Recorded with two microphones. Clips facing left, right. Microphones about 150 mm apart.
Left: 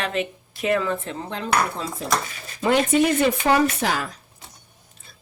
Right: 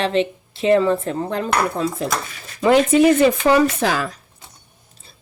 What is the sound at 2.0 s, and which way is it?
Speech, 85° right.